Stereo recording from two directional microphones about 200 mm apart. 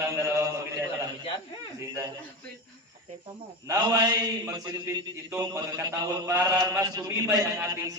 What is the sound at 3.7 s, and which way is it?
A man's voice, 20° right (ahead or behind).